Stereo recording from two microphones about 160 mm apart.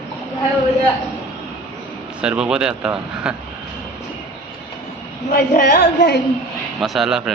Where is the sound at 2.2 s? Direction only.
5° right (ahead or behind).